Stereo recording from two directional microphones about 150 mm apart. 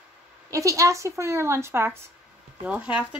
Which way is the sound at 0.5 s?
20° right (ahead or behind).